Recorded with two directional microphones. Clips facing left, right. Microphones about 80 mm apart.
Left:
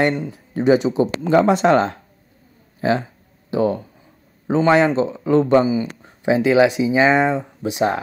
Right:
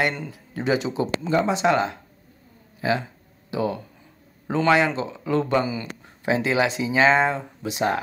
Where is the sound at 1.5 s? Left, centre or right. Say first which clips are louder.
Left 6 dB; left.